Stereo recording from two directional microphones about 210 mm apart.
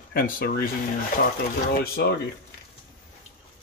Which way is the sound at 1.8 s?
45° left (ahead or behind).